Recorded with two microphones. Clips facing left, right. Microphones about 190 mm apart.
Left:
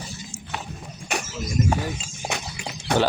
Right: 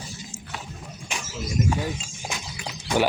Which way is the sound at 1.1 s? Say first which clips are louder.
Left 7 dB; 65° left (ahead or behind).